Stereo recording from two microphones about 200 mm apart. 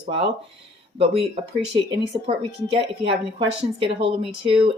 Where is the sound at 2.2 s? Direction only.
30° right (ahead or behind).